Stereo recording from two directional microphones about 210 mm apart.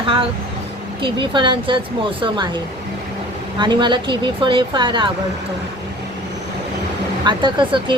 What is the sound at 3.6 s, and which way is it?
Speech, 20° right (ahead or behind).